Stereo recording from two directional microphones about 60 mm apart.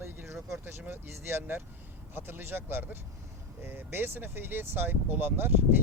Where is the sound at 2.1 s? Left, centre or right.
Right.